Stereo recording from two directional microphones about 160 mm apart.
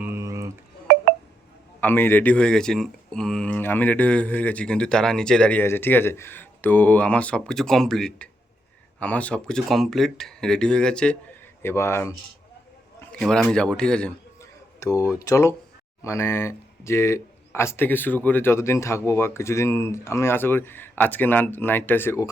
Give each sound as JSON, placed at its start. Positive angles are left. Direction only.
{"t": 0.0, "sound": "a sound", "side_deg": -15}
{"t": 1.8, "sound": "speech", "side_deg": 15}
{"t": 13.0, "sound": "speech", "side_deg": 5}
{"t": 14.8, "sound": "speech", "side_deg": 20}